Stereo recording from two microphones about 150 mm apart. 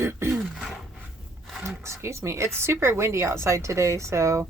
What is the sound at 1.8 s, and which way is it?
Speech, 20° right (ahead or behind).